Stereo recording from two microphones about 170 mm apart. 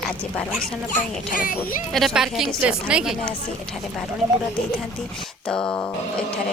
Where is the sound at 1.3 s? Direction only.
55° left (ahead or behind).